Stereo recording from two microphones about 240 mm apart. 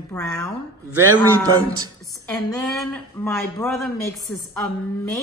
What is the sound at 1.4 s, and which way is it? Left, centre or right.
Speech, centre.